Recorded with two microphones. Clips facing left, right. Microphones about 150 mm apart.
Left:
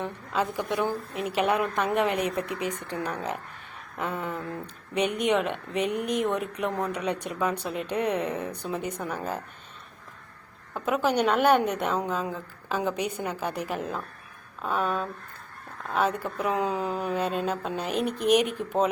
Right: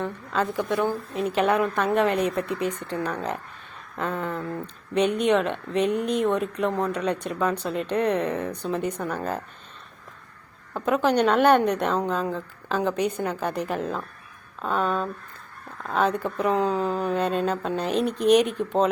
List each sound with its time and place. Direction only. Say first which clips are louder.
0.0 s a woman's voice: right 2 dB; 15° left (ahead or behind)
4.4 s speech: right 4 dB; 20° right (ahead or behind)
4.6 s a woman's voice: right 5 dB; 10° left (ahead or behind)
10.8 s a woman's voice: right 3 dB; 10° left (ahead or behind)
16.4 s a woman's voice: right 4 dB; 10° left (ahead or behind)